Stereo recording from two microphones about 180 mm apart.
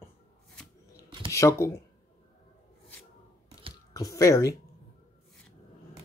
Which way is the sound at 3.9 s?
20° left (ahead or behind).